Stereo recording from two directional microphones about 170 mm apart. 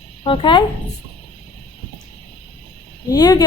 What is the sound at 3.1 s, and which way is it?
Speech, 20° left (ahead or behind).